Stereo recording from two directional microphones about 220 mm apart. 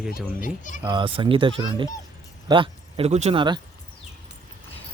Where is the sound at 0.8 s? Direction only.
20° right (ahead or behind).